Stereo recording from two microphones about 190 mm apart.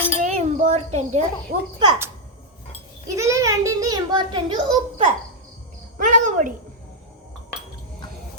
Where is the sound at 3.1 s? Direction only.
15° right (ahead or behind).